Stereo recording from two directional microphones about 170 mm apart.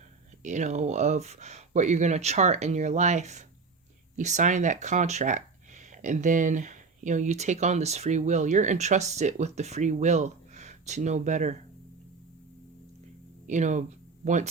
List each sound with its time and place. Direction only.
0.4 s speech: 45° right (ahead or behind)
13.5 s speech: 45° right (ahead or behind)